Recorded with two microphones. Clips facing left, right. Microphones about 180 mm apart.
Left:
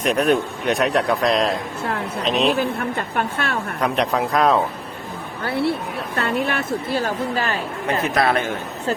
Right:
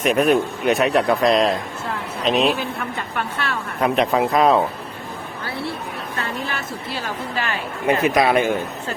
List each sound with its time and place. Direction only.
0.0 s a man's voice: 5° right (ahead or behind)
2.6 s a woman's voice: 50° left (ahead or behind)
3.8 s a man's voice: centre (ahead or behind)
5.5 s a woman's voice: 65° left (ahead or behind); by 7.6 s 40° left (ahead or behind)
7.9 s speech: 10° right (ahead or behind)